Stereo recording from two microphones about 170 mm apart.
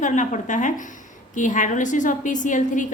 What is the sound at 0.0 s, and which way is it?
A woman's voice, 45° left (ahead or behind).